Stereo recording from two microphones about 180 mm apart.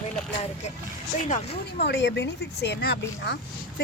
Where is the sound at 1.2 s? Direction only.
40° left (ahead or behind).